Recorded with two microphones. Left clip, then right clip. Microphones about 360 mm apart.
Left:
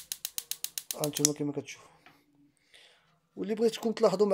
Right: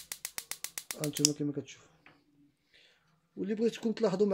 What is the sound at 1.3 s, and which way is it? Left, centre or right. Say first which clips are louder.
Speech: left 2 dB; left.